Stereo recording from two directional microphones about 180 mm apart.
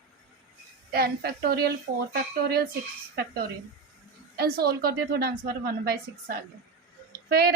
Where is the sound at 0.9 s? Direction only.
60° right (ahead or behind).